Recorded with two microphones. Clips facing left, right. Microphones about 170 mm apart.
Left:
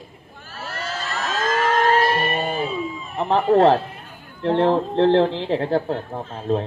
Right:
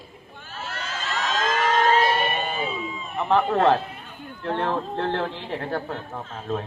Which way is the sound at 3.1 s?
35° left (ahead or behind).